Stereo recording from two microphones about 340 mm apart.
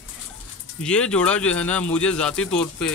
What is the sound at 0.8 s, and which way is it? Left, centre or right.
Speech, centre.